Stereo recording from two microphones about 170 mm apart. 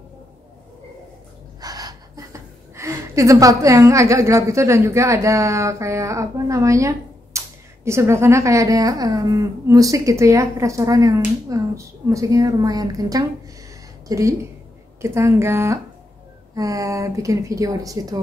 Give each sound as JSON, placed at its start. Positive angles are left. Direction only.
{"t": 1.6, "sound": "a woman's voice", "side_deg": -20}